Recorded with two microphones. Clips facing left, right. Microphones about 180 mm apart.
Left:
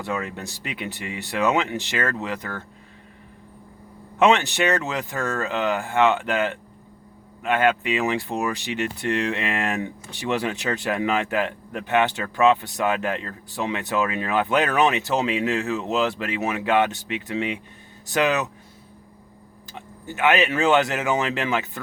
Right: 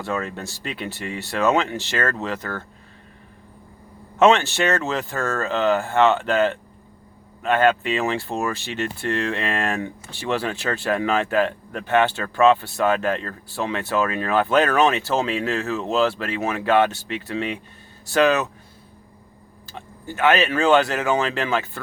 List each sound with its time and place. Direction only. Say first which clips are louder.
0.0 s speech: right 2 dB; 15° left (ahead or behind)
4.2 s speech: right 2 dB; 15° left (ahead or behind)
19.7 s speech: right 2 dB; 15° left (ahead or behind)